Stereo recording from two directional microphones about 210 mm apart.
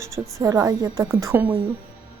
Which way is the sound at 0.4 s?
15° right (ahead or behind).